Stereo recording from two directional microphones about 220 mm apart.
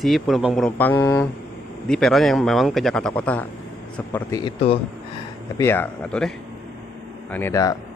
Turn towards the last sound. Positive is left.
turn(degrees=15)  # may be behind; listen again after turning